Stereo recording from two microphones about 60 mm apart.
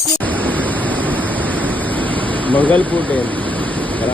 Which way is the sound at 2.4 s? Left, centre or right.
Left.